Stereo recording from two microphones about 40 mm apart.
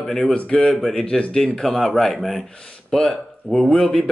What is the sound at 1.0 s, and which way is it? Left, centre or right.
A man's voice, left.